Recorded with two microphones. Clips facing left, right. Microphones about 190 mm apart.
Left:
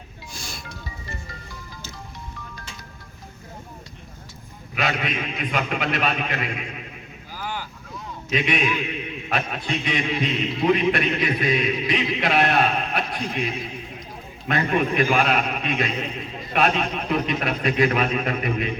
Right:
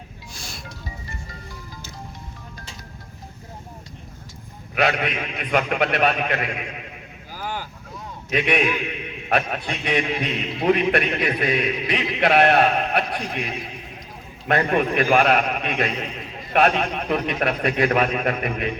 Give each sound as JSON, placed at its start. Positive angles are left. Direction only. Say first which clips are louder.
{"t": 0.3, "sound": "music", "louder": "left 2 dB", "side_deg": 0}
{"t": 4.7, "sound": "a man's voice", "louder": "right 4 dB", "side_deg": -55}
{"t": 7.3, "sound": "vehicle", "louder": "right 1 dB", "side_deg": -45}
{"t": 8.3, "sound": "a man's voice", "louder": "right 2 dB", "side_deg": -55}
{"t": 14.4, "sound": "a man's voice", "louder": "right 2 dB", "side_deg": -55}